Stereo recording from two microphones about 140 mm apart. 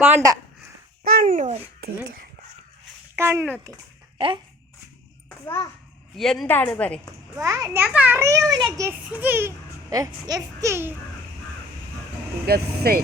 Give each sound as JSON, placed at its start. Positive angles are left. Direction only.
{"t": 0.0, "sound": "a child's voice", "side_deg": -25}
{"t": 1.0, "sound": "speech", "side_deg": -85}
{"t": 3.2, "sound": "a child's voice", "side_deg": -15}
{"t": 6.1, "sound": "a woman's voice", "side_deg": 0}
{"t": 7.3, "sound": "a child's voice", "side_deg": -25}
{"t": 7.8, "sound": "a child's voice", "side_deg": -10}
{"t": 8.9, "sound": "a child's voice", "side_deg": -10}
{"t": 9.9, "sound": "a child's voice", "side_deg": -25}
{"t": 12.5, "sound": "speech", "side_deg": -90}